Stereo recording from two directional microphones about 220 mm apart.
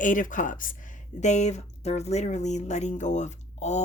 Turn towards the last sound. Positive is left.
turn(degrees=30)  # may be behind; listen again after turning